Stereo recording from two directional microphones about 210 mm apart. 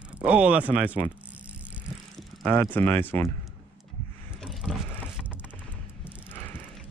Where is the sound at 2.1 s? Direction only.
10° left (ahead or behind).